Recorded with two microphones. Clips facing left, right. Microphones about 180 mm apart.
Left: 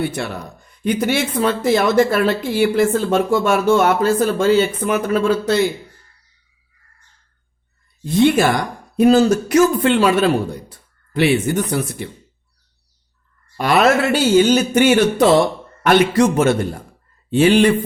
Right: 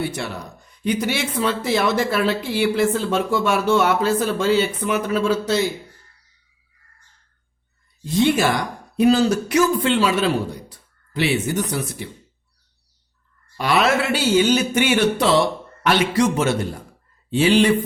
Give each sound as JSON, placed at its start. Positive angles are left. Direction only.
{"t": 0.0, "sound": "speech", "side_deg": 55}
{"t": 8.0, "sound": "speech", "side_deg": 55}
{"t": 13.6, "sound": "speech", "side_deg": 50}